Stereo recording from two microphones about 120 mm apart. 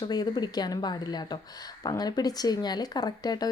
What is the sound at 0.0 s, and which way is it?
A woman's voice, 35° left (ahead or behind).